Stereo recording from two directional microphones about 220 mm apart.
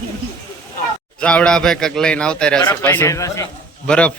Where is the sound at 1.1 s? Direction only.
5° left (ahead or behind).